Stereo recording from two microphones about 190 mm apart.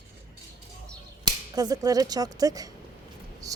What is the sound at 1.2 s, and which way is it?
Speech, 20° right (ahead or behind).